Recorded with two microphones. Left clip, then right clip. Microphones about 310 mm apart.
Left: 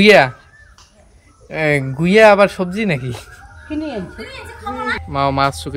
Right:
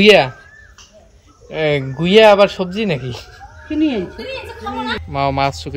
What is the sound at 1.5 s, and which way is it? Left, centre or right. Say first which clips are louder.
Speech: even; centre.